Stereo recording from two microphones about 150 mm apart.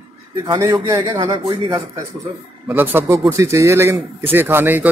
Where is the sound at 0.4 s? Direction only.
25° right (ahead or behind).